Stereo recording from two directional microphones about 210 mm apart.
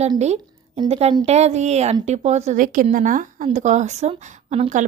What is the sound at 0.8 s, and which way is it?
Speech, 30° right (ahead or behind).